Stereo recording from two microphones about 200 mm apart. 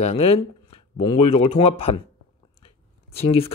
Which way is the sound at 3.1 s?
30° left (ahead or behind).